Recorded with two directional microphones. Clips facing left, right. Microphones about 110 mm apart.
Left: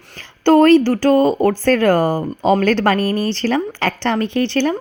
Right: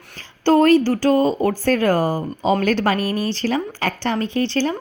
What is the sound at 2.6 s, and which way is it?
A woman's voice, 80° left.